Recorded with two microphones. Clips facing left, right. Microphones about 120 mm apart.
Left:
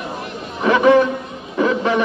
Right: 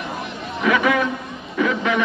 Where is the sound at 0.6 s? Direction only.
35° left (ahead or behind).